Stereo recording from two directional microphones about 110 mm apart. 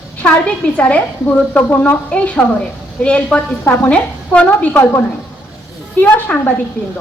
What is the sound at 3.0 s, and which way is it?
A woman's voice, 10° left (ahead or behind).